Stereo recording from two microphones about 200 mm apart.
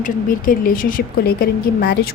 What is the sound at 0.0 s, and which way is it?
A woman's voice, 45° left (ahead or behind).